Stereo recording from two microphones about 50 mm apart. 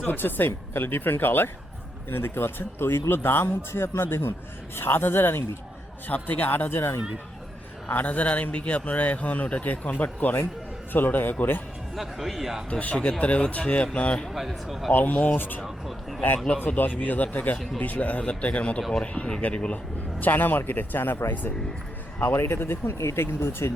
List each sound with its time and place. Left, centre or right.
0.1 s speech: left
6.1 s speech: left
7.9 s a man's voice: left
11.9 s speech: centre
12.8 s speech: left
14.3 s speech: centre
14.9 s a man's voice: left
15.6 s speech: centre
16.6 s a man's voice: left
18.8 s speech: centre
19.1 s a man's voice: left
22.4 s speech: left
23.0 s speech: left